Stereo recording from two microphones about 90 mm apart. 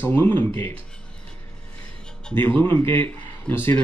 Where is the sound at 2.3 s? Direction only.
25° left (ahead or behind).